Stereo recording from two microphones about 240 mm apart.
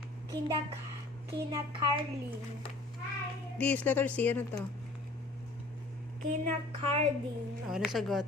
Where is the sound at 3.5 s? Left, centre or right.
Centre.